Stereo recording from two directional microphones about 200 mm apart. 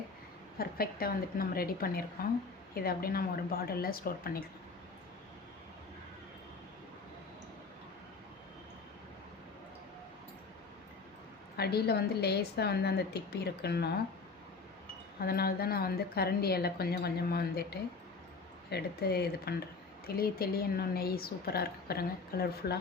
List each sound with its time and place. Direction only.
0.6 s a woman's voice: 50° left (ahead or behind)
11.5 s a woman's voice: 55° left (ahead or behind)
15.2 s a woman's voice: 50° left (ahead or behind)